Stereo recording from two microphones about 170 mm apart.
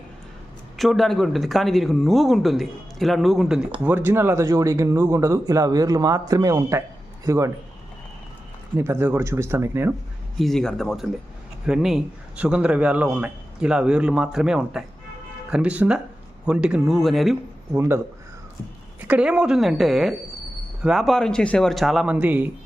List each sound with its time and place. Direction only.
0.8 s a man's voice: centre (ahead or behind)
3.8 s a man's voice: 15° right (ahead or behind)
8.7 s a man's voice: 15° right (ahead or behind)
10.3 s a man's voice: centre (ahead or behind)
17.7 s a man's voice: 15° right (ahead or behind)